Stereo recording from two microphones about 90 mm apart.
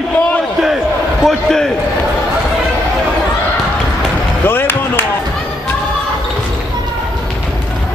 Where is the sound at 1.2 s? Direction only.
5° left (ahead or behind).